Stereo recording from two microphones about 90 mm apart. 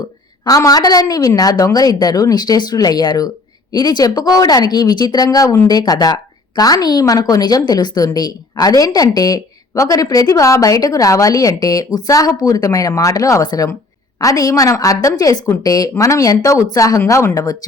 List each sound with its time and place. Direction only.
0.4 s a woman's voice: 40° left (ahead or behind)